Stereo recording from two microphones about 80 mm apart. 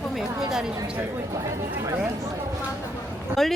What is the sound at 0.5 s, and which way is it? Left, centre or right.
Speech, centre.